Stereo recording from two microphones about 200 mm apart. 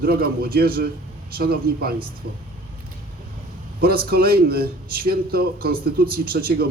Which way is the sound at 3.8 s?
50° right (ahead or behind).